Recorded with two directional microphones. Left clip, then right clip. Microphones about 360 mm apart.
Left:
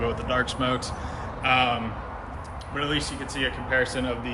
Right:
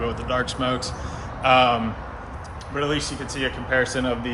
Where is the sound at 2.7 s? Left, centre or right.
Centre.